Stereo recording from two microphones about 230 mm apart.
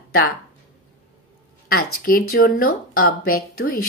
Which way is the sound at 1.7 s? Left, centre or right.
Left.